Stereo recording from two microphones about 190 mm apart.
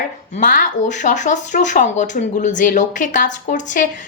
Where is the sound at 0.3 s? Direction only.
45° left (ahead or behind).